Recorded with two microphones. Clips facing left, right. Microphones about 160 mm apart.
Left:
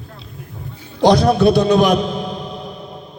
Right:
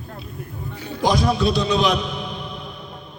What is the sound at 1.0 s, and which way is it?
A man's voice, 70° left (ahead or behind).